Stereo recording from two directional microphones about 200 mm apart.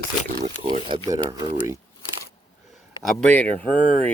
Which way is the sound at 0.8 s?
25° right (ahead or behind).